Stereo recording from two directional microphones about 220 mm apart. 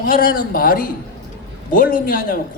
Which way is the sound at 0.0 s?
40° left (ahead or behind).